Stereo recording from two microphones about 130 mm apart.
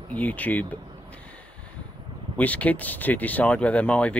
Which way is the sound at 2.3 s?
10° left (ahead or behind).